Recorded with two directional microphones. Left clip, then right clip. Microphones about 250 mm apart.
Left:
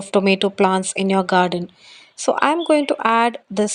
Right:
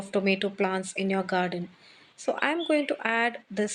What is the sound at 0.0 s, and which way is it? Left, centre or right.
Speech, left.